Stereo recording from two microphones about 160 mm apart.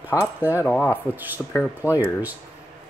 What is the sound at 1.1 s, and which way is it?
Speech, 10° right (ahead or behind).